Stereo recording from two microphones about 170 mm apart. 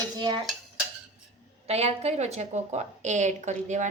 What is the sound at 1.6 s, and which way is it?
A woman's voice, 40° right (ahead or behind).